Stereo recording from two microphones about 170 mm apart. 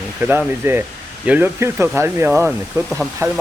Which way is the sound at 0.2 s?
15° right (ahead or behind).